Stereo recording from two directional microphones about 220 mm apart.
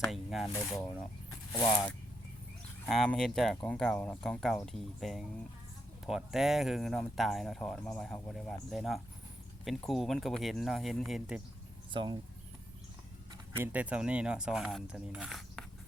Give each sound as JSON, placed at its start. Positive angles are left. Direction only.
{"t": 0.0, "sound": "speech", "side_deg": 0}
{"t": 2.8, "sound": "speech", "side_deg": 5}
{"t": 11.9, "sound": "speech", "side_deg": -20}
{"t": 13.6, "sound": "speech", "side_deg": -5}